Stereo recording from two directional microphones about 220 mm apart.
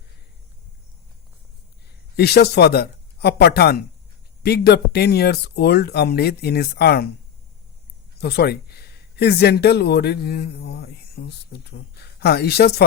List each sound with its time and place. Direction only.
2.1 s speech: 45° left (ahead or behind)
8.2 s speech: 45° left (ahead or behind)